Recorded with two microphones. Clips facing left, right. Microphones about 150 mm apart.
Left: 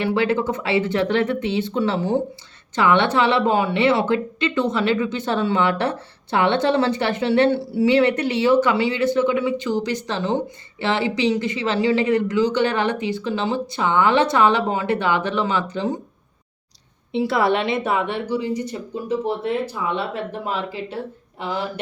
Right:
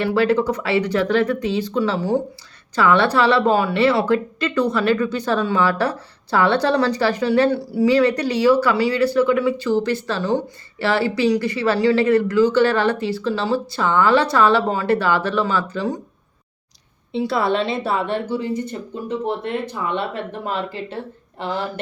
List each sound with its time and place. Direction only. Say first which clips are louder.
0.0 s a woman's voice: right 2 dB; 25° left (ahead or behind)
17.7 s speech: even; 35° right (ahead or behind)
18.4 s speech: even; 55° right (ahead or behind)
19.4 s speech: left 2 dB; 5° left (ahead or behind)
19.7 s speech: right 1 dB; 60° right (ahead or behind)